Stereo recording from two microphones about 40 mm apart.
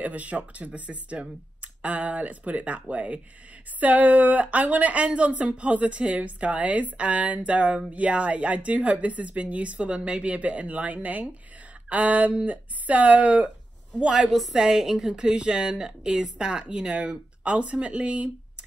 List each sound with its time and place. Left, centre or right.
0.0 s speech: right
14.0 s a woman's voice: centre
15.1 s speech: right